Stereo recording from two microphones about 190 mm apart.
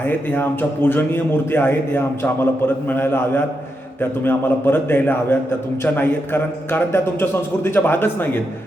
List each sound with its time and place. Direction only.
0.0 s a man's voice: 10° left (ahead or behind)